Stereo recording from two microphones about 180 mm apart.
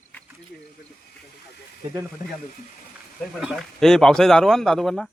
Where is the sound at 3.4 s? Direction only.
Centre (ahead or behind).